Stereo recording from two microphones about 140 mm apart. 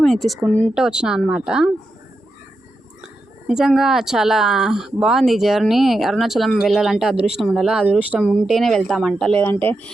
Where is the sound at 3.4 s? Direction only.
5° right (ahead or behind).